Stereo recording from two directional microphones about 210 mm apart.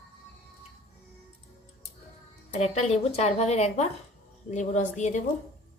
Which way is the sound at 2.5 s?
30° left (ahead or behind).